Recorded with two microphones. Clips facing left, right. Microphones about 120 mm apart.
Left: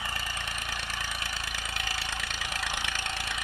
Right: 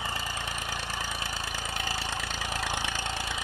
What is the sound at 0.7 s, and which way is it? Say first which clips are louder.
Engine: right 2 dB; 30° right (ahead or behind).